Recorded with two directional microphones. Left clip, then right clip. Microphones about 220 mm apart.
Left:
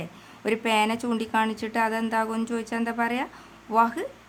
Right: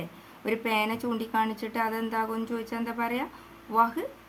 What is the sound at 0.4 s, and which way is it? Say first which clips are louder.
A woman's voice: left 4 dB; 35° left (ahead or behind).